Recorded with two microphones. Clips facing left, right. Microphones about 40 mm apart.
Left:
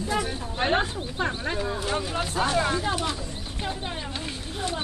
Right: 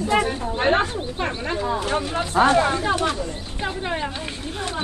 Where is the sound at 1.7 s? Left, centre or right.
Right.